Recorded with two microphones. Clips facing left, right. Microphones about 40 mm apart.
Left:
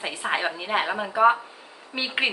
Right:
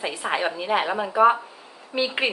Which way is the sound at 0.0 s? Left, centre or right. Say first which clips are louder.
Right 1 dB; centre.